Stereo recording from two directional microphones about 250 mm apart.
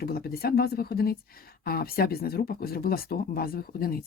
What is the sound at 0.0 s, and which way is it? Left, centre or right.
A woman's voice, left.